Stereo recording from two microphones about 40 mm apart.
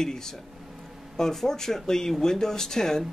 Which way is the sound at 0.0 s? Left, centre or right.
Centre.